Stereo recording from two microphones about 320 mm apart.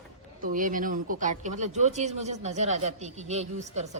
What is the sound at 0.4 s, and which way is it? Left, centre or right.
Speech, right.